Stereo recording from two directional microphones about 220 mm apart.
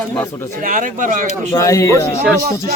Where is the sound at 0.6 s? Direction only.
35° right (ahead or behind).